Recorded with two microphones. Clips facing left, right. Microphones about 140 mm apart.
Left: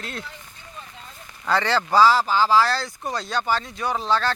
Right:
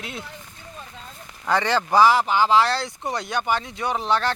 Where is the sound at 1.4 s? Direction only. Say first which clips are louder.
Even; 15° right (ahead or behind).